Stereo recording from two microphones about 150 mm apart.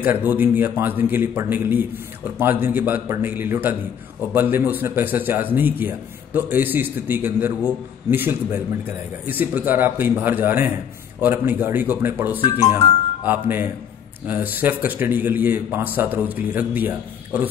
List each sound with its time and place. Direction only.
0.0 s a man's voice: 10° right (ahead or behind)
12.4 s speech: 50° left (ahead or behind)
13.2 s a man's voice: 10° right (ahead or behind)